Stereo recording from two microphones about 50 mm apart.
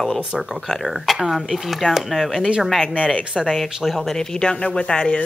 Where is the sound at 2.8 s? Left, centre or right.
Left.